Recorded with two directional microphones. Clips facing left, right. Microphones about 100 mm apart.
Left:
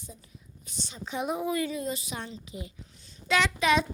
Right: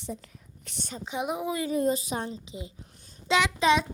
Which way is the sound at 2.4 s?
25° right (ahead or behind).